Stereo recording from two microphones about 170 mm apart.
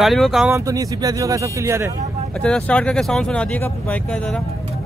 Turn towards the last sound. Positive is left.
turn(degrees=10)  # may be behind; listen again after turning